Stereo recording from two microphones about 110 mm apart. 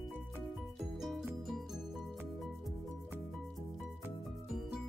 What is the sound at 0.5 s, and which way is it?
Music, centre (ahead or behind).